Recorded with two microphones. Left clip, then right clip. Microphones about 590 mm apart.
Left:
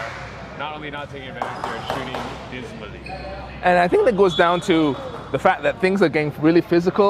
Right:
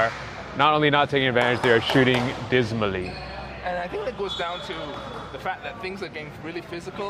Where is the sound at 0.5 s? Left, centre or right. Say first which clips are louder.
Right 12 dB; right.